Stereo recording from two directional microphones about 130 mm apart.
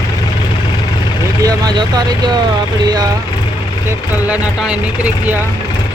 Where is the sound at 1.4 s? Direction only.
35° right (ahead or behind).